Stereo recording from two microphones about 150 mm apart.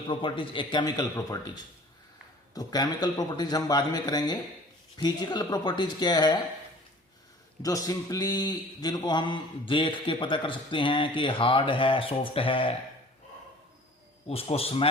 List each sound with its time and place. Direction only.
0.1 s a man's voice: 35° left (ahead or behind)
2.6 s a man's voice: 25° left (ahead or behind)
7.6 s a man's voice: 25° left (ahead or behind)
14.3 s a man's voice: 40° left (ahead or behind)